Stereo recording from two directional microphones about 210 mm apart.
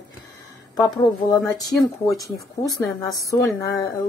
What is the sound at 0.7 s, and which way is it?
Speech, 20° left (ahead or behind).